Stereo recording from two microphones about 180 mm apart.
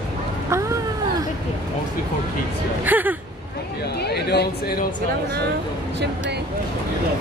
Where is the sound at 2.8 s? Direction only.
10° right (ahead or behind).